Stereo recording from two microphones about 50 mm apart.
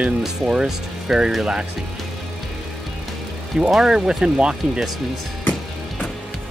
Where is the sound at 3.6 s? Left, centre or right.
Centre.